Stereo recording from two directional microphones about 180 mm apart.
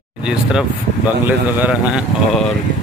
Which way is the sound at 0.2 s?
5° right (ahead or behind).